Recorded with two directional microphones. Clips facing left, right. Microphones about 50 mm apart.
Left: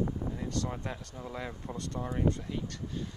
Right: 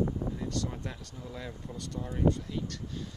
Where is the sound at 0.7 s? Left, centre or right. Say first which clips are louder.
Left 2 dB; centre.